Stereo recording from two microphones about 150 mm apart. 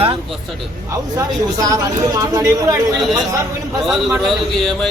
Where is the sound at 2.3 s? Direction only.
25° right (ahead or behind).